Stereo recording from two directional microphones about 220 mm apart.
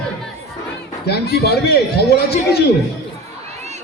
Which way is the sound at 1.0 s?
45° left (ahead or behind).